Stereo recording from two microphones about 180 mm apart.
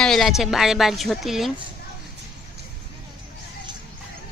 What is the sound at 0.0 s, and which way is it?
Speech, centre (ahead or behind).